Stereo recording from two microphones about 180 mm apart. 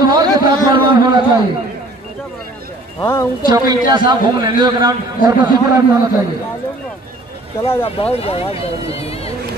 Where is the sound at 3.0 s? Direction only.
15° left (ahead or behind).